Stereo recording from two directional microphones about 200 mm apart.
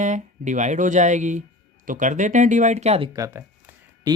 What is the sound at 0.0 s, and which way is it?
Speech, 35° right (ahead or behind).